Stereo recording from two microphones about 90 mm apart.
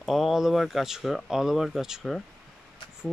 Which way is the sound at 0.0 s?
Centre (ahead or behind).